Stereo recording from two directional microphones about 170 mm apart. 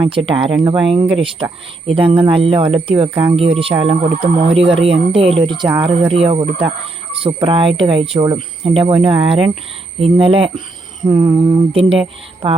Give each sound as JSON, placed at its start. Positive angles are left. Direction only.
{"t": 0.0, "sound": "speech", "side_deg": -30}